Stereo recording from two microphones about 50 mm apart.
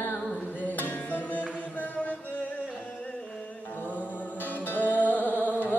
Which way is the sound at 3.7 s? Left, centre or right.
Left.